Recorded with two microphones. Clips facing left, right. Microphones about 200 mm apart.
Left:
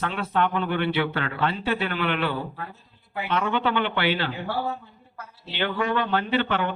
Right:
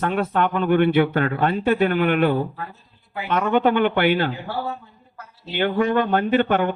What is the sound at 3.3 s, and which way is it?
Speech, 50° right (ahead or behind).